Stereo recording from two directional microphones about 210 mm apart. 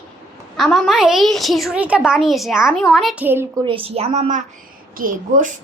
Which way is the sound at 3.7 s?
25° right (ahead or behind).